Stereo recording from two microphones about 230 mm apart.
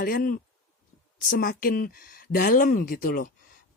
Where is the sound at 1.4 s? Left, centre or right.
Left.